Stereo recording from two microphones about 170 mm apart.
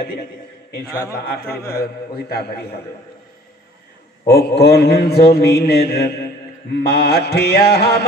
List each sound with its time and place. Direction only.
1.1 s a man's voice: 65° left (ahead or behind)
4.3 s mantra: 70° left (ahead or behind)